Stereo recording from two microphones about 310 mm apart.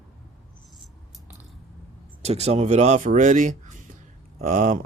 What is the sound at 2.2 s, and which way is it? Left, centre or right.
Speech, right.